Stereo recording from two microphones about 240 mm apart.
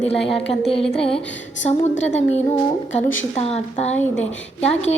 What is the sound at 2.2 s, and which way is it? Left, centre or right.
A woman's voice, left.